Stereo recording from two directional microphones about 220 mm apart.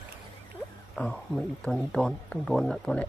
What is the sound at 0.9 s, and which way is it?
Speech, 5° left (ahead or behind).